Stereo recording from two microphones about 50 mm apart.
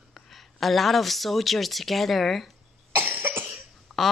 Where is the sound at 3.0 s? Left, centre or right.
Right.